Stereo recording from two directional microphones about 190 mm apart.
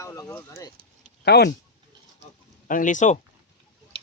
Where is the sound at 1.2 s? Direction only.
60° left (ahead or behind).